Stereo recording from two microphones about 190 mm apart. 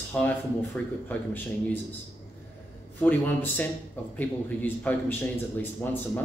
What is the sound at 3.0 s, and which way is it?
A man's voice, 10° left (ahead or behind).